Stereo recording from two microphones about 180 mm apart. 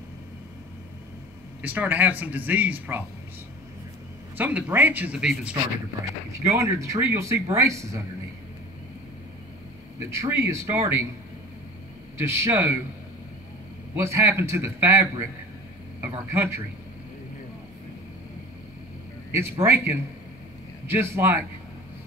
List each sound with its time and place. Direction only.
1.6 s speech: 10° right (ahead or behind)
4.4 s speech: 10° right (ahead or behind)
9.9 s speech: 15° right (ahead or behind)
12.2 s speech: 15° right (ahead or behind)
13.9 s speech: 15° right (ahead or behind)
16.3 s speech: 15° right (ahead or behind)
19.6 s speech: 15° right (ahead or behind)